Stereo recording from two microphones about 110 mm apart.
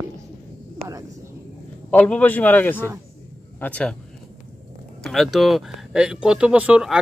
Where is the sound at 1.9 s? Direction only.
15° left (ahead or behind).